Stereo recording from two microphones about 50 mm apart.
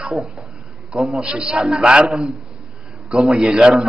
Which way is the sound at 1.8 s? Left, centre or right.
Centre.